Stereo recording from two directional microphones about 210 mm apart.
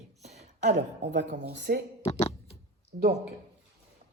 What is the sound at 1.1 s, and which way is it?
Speech, 55° right (ahead or behind).